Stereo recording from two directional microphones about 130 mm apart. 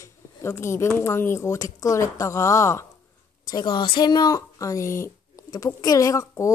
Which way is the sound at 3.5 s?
35° left (ahead or behind).